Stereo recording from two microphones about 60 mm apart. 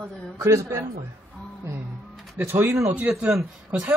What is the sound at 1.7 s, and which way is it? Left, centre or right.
Music, right.